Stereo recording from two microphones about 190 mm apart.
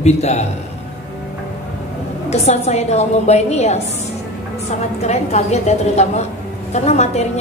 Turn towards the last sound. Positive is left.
turn(degrees=35)  # may be behind; listen again after turning